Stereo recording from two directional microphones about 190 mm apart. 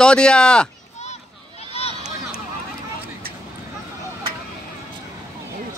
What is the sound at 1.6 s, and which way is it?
Run, 35° left (ahead or behind).